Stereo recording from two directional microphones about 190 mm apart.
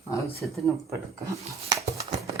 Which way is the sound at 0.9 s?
15° right (ahead or behind).